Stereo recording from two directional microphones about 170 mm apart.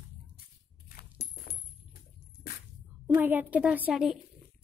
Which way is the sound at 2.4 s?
60° left (ahead or behind).